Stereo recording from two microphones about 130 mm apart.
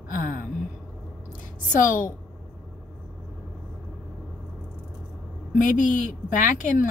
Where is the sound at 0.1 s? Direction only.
90° left.